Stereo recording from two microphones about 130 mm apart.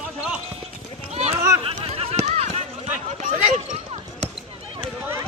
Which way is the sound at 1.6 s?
50° right (ahead or behind).